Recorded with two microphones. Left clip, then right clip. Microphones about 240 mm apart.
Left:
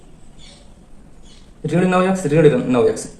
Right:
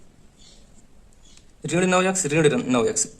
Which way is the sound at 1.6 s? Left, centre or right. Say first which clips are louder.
Left 4 dB; right.